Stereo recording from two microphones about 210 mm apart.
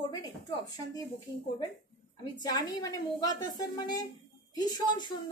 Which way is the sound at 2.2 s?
20° left (ahead or behind).